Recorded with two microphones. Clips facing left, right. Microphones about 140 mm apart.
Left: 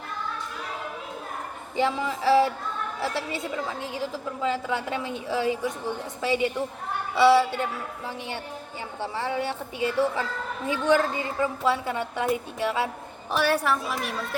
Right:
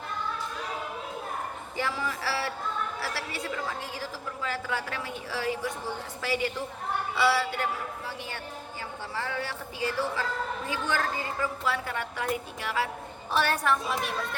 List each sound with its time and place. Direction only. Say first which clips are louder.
1.7 s a woman's voice: left 7 dB; 20° left (ahead or behind)
13.3 s a woman's voice: left 2 dB; 10° left (ahead or behind)